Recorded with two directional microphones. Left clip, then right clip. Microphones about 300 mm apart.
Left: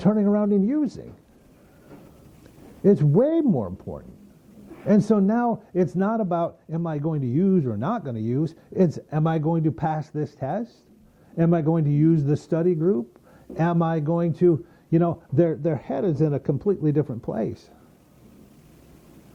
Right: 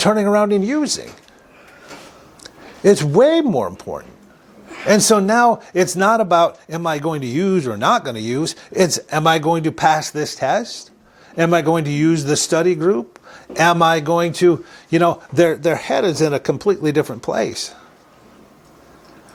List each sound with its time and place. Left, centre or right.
0.0 s speech: centre
1.9 s a sound: centre
3.1 s speech: centre
3.4 s speech: centre
4.7 s speech: centre